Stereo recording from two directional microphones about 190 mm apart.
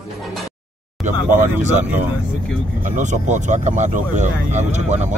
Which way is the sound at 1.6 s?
40° right (ahead or behind).